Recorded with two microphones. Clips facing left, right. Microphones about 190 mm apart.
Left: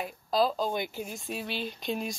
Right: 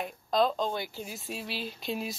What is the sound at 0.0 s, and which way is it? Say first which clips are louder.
Speech: even; 5° left (ahead or behind).